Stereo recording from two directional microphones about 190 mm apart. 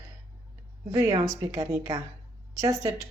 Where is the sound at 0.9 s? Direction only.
15° right (ahead or behind).